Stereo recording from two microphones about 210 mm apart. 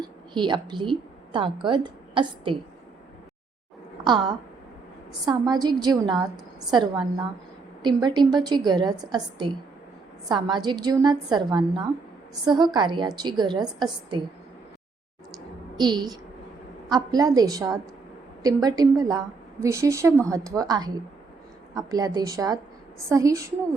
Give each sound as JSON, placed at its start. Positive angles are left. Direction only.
{"t": 0.0, "sound": "a woman's voice", "side_deg": -20}
{"t": 4.0, "sound": "a woman's voice", "side_deg": -20}
{"t": 15.8, "sound": "a woman's voice", "side_deg": -20}